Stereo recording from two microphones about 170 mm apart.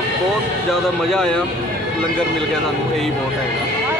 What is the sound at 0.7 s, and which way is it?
Speech, 5° left (ahead or behind).